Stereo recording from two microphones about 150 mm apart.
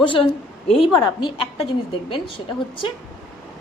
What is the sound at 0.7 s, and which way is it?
A woman's voice, 35° left (ahead or behind).